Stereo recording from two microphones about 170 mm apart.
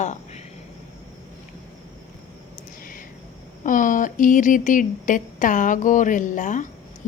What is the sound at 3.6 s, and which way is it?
A woman's voice, 50° left (ahead or behind).